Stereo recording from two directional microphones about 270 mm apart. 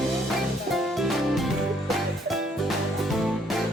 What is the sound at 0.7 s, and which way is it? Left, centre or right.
Music, centre.